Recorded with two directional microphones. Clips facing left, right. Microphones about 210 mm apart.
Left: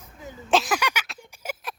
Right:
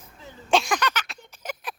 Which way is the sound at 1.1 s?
10° left (ahead or behind).